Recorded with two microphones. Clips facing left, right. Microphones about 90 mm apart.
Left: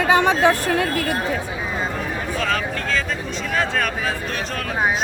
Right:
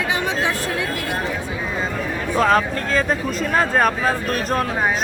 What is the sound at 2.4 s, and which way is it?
Speech, 40° right (ahead or behind).